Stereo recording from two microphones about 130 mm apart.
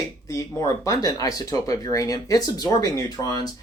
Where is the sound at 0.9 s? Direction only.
30° left (ahead or behind).